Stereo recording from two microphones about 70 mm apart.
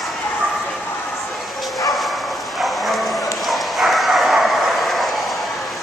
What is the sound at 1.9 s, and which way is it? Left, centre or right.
Bow-wow, centre.